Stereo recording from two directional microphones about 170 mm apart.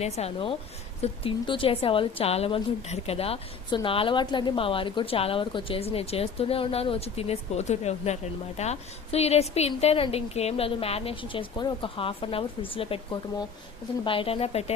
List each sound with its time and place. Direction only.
0.0 s a woman's voice: 35° left (ahead or behind)
14.0 s a woman's voice: 30° left (ahead or behind)